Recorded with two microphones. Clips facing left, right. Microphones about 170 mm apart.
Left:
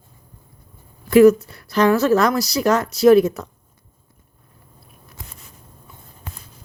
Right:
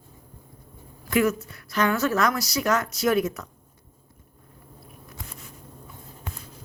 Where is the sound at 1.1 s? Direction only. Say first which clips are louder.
Left 12 dB; 35° left (ahead or behind).